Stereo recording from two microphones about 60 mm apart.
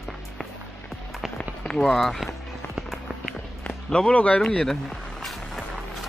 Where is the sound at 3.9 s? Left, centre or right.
Centre.